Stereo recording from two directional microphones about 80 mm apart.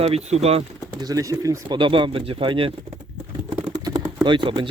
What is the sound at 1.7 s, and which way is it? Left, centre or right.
Speech, right.